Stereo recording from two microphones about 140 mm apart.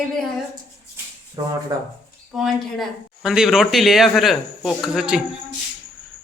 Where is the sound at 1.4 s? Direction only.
25° right (ahead or behind).